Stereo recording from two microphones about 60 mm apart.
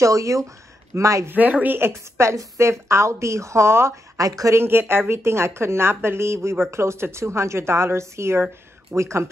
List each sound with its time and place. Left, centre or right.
0.0 s speech: right
1.3 s speech: right
1.8 s speech: right
4.2 s speech: right
4.6 s speech: right